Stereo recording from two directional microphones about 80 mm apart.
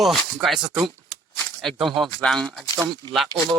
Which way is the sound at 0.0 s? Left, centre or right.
Centre.